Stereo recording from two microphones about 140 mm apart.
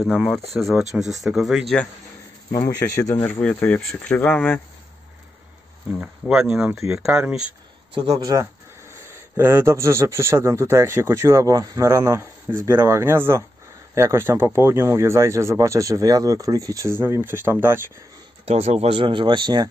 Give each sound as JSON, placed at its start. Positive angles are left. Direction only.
{"t": 0.0, "sound": "speech", "side_deg": 0}
{"t": 2.5, "sound": "speech", "side_deg": 15}
{"t": 3.3, "sound": "speech", "side_deg": 10}
{"t": 5.9, "sound": "speech", "side_deg": -10}
{"t": 7.9, "sound": "speech", "side_deg": -35}
{"t": 9.0, "sound": "speech", "side_deg": -15}
{"t": 18.4, "sound": "speech", "side_deg": -45}